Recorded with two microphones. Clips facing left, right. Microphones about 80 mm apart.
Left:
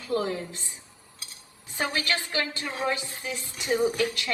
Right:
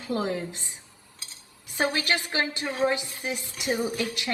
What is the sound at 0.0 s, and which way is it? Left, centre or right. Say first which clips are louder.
Speech: even; right.